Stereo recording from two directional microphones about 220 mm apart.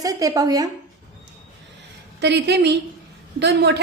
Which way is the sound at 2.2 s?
50° right (ahead or behind).